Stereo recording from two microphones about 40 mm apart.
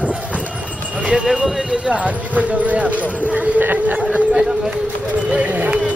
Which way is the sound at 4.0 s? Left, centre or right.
Right.